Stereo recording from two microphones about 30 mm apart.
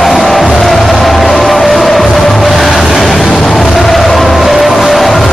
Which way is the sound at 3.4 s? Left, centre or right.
Centre.